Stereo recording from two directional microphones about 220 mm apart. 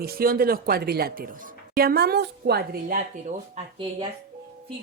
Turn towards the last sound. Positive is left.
turn(degrees=-20)  # may be behind; listen again after turning